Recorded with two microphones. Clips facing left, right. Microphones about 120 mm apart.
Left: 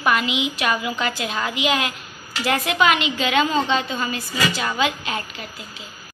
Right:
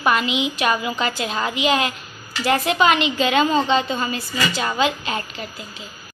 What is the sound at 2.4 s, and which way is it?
Speech, 40° right (ahead or behind).